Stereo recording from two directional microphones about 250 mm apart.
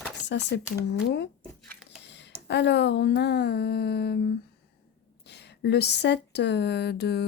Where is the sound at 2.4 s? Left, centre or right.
Left.